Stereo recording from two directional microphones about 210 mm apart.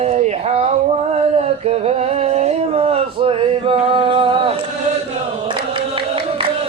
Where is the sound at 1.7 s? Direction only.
30° right (ahead or behind).